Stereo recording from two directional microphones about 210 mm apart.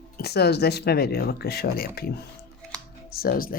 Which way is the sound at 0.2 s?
50° left (ahead or behind).